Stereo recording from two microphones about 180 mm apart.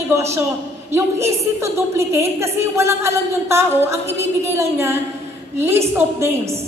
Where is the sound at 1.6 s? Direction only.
15° right (ahead or behind).